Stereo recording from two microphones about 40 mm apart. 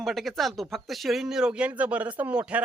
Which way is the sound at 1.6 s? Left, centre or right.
Right.